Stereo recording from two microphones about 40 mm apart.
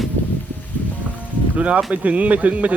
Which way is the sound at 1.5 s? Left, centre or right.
Right.